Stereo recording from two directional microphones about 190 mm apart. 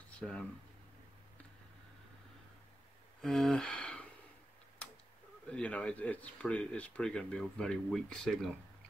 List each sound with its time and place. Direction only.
0.2 s speech: 5° left (ahead or behind)
3.2 s a sound: centre (ahead or behind)
5.5 s speech: 5° left (ahead or behind)